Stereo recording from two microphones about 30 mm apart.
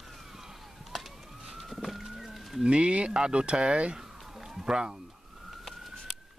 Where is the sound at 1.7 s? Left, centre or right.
Centre.